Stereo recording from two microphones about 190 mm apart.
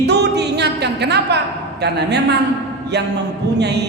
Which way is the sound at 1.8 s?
60° right (ahead or behind).